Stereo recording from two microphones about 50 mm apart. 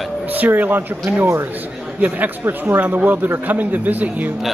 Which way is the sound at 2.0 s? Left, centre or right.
Right.